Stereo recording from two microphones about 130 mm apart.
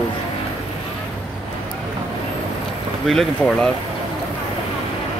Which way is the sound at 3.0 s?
Centre (ahead or behind).